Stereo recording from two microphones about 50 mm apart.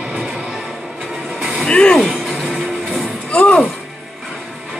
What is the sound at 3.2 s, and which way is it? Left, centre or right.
Speech, left.